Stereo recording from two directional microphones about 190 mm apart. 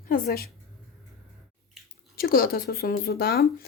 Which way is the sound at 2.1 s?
50° left (ahead or behind).